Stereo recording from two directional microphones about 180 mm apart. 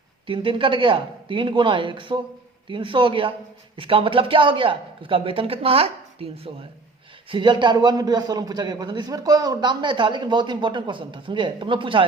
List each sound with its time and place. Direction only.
0.3 s a man's voice: 30° right (ahead or behind)